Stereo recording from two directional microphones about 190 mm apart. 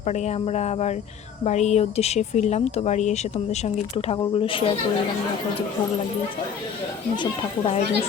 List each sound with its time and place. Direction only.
0.0 s speech: 35° left (ahead or behind)
7.2 s speech: 25° left (ahead or behind)